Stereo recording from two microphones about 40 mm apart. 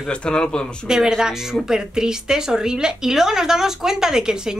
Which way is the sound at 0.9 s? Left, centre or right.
Centre.